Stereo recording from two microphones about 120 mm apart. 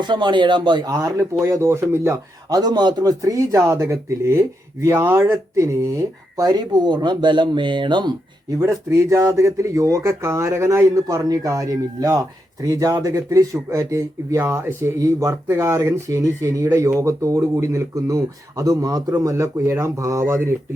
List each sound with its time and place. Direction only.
0.0 s speech: 40° right (ahead or behind); by 2.1 s 20° right (ahead or behind)
2.5 s speech: 35° right (ahead or behind)
8.5 s speech: 25° right (ahead or behind)